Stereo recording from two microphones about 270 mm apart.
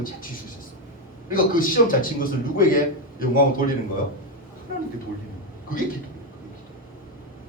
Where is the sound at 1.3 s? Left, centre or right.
Left.